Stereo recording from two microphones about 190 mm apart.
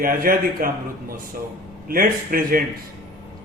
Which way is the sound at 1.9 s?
50° right (ahead or behind).